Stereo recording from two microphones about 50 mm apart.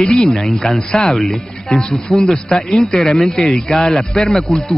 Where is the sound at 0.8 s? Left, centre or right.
Centre.